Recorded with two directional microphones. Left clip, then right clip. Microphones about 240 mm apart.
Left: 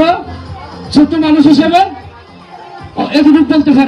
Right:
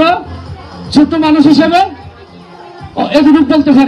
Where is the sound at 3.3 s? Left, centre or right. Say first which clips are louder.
Left 2 dB; right.